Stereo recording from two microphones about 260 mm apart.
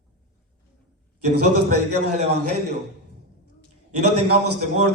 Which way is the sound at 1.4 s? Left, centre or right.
Right.